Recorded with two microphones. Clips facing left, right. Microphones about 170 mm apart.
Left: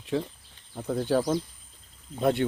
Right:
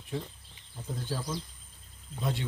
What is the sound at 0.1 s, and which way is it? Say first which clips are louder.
Speech: left 8 dB; 90° left.